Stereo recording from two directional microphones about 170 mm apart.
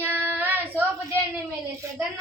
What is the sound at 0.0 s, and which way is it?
Child singing, 10° right (ahead or behind).